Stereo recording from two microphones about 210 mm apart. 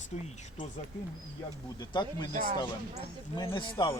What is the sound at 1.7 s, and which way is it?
Speech, 20° left (ahead or behind).